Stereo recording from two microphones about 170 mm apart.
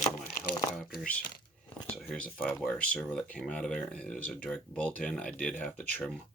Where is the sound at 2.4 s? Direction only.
5° left (ahead or behind).